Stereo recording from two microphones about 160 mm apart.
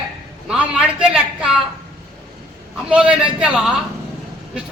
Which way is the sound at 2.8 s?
5° right (ahead or behind).